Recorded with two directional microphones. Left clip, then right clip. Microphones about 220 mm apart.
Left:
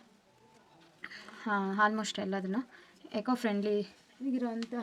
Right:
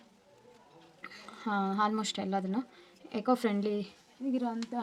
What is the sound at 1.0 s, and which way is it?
Speech, 5° left (ahead or behind).